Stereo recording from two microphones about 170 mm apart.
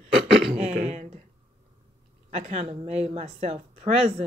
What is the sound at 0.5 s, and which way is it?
Speech, 45° right (ahead or behind).